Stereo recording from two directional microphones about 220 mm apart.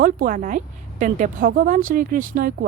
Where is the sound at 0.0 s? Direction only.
40° right (ahead or behind).